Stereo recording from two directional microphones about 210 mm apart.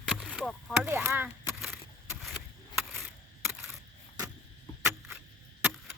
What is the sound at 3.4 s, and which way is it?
Single-lens reflex camera, 10° right (ahead or behind).